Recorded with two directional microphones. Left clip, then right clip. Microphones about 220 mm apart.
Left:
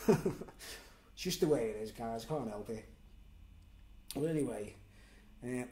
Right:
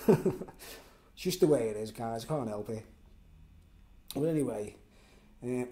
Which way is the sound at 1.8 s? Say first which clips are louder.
Right 4 dB; 35° right (ahead or behind).